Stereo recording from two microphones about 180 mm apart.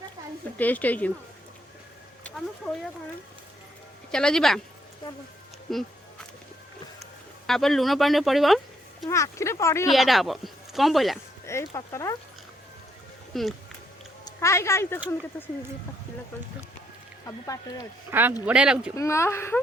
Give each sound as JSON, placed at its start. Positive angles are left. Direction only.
{"t": 0.6, "sound": "speech", "side_deg": 10}
{"t": 2.6, "sound": "speech", "side_deg": 0}
{"t": 4.1, "sound": "speech", "side_deg": 5}
{"t": 5.7, "sound": "speech", "side_deg": 0}
{"t": 7.4, "sound": "speech", "side_deg": 0}
{"t": 9.0, "sound": "speech", "side_deg": 15}
{"t": 9.9, "sound": "speech", "side_deg": 0}
{"t": 11.4, "sound": "speech", "side_deg": 15}
{"t": 13.3, "sound": "speech", "side_deg": 0}
{"t": 14.3, "sound": "speech", "side_deg": 15}
{"t": 17.2, "sound": "speech", "side_deg": 20}
{"t": 18.1, "sound": "speech", "side_deg": -10}
{"t": 18.9, "sound": "speech", "side_deg": 15}